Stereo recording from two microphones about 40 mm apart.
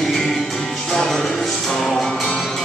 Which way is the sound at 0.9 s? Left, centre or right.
Centre.